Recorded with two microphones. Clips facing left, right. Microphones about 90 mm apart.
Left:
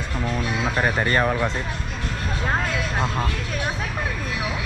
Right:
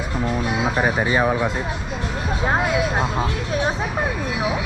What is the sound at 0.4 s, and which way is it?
Speech, 15° right (ahead or behind).